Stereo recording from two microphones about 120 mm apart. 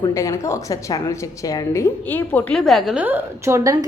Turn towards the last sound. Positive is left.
turn(degrees=-30)  # may be behind; listen again after turning